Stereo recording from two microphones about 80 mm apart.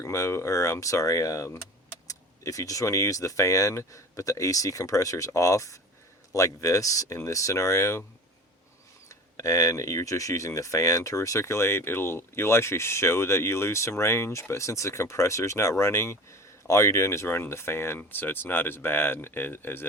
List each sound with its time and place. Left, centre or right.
0.0 s speech: left
9.0 s speech: left